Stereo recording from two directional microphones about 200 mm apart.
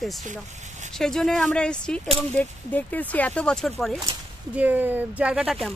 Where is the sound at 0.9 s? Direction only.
5° left (ahead or behind).